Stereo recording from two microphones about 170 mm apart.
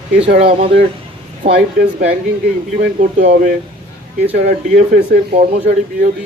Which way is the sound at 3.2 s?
50° right (ahead or behind).